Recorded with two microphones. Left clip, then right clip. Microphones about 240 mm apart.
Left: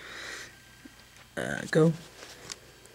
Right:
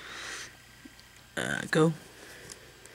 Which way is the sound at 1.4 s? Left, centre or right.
Centre.